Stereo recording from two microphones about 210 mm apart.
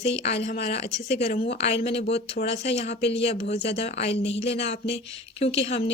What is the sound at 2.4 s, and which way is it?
Speech, 55° left (ahead or behind).